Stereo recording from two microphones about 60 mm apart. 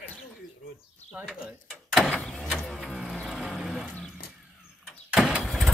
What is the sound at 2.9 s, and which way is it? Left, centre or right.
Music, centre.